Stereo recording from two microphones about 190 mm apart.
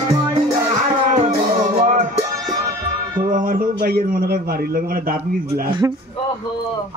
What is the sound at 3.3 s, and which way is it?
A man's voice, 50° right (ahead or behind).